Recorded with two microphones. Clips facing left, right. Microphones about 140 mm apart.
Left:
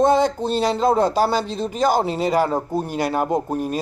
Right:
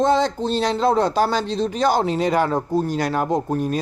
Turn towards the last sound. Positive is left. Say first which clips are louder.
# right 1 dB
turn(degrees=5)  # may be behind; listen again after turning